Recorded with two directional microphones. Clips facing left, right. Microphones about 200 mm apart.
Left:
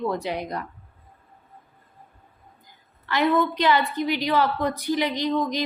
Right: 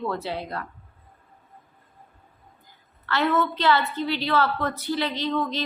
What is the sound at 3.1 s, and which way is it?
A woman's voice, 15° left (ahead or behind).